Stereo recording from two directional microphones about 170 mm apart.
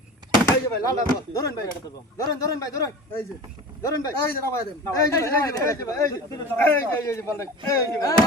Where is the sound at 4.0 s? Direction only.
15° left (ahead or behind).